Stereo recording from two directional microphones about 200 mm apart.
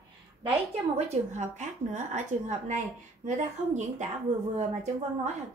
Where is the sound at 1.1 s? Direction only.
35° right (ahead or behind).